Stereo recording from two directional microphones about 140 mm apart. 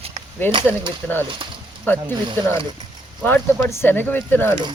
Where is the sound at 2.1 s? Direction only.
30° right (ahead or behind).